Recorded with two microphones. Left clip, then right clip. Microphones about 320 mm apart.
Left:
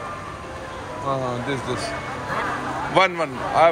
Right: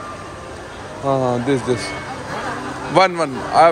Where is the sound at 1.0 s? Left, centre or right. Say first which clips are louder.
Right 7 dB; right.